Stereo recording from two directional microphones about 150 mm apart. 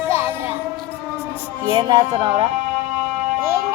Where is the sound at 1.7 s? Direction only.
30° right (ahead or behind).